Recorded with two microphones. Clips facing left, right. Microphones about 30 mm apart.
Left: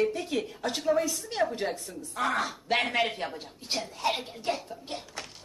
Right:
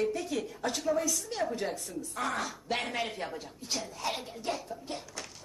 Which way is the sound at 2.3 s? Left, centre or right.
Left.